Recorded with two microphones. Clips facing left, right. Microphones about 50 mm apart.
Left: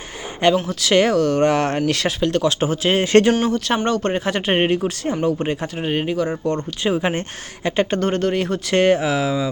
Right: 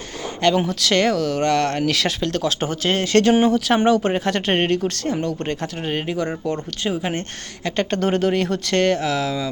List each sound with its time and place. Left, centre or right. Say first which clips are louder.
0.7 s speech: left 2 dB; centre
3.0 s speech: left 4 dB; left
3.4 s speech: right 3 dB; centre
6.8 s speech: left 4 dB; centre
7.9 s speech: even; centre